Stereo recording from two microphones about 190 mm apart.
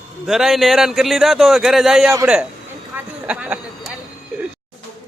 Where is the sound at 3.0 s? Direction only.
5° right (ahead or behind).